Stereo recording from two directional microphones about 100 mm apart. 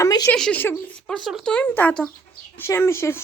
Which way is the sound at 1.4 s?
15° left (ahead or behind).